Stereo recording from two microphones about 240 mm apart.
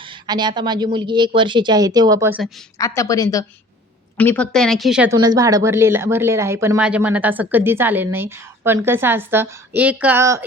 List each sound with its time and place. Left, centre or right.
0.0 s a woman's voice: centre
2.7 s speech: centre
5.1 s speech: centre